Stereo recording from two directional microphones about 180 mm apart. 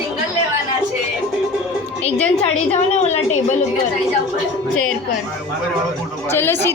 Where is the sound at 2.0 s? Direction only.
35° left (ahead or behind).